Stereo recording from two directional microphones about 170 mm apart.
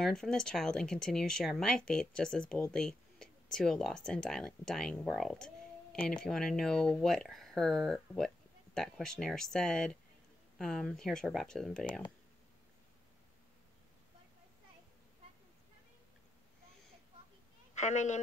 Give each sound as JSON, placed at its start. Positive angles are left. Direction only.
{"t": 0.0, "sound": "speech", "side_deg": 5}
{"t": 2.7, "sound": "a sound", "side_deg": 5}
{"t": 3.5, "sound": "speech", "side_deg": 5}
{"t": 17.7, "sound": "a woman's voice", "side_deg": 45}